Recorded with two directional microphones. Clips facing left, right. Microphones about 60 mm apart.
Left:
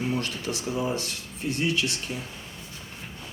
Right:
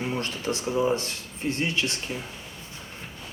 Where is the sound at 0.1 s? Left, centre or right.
Right.